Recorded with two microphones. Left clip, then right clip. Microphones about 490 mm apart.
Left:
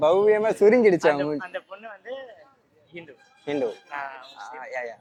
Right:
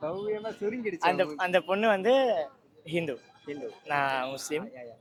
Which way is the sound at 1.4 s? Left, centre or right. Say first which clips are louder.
Right 9 dB; right.